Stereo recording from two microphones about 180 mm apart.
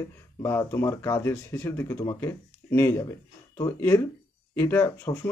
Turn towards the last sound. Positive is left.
turn(degrees=20)  # may be behind; listen again after turning